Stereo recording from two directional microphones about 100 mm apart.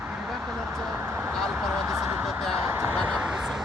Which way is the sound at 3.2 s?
5° right (ahead or behind).